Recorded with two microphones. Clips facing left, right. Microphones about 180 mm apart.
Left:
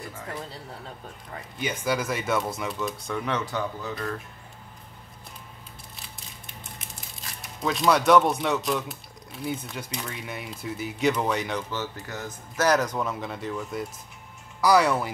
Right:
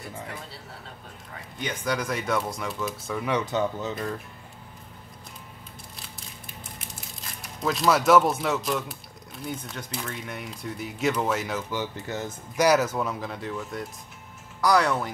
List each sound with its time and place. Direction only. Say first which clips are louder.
1.6 s speech: left 1 dB; 5° left (ahead or behind)
3.3 s speech: right 4 dB; 20° right (ahead or behind)
7.4 s speech: even; centre (ahead or behind)